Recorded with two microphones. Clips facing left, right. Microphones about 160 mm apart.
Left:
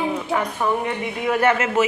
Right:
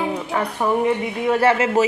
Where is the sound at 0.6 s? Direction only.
10° right (ahead or behind).